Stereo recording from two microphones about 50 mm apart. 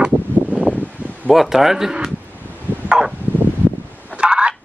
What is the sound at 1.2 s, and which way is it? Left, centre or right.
Speech, centre.